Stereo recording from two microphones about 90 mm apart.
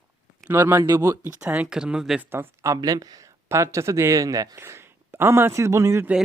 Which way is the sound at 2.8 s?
45° right (ahead or behind).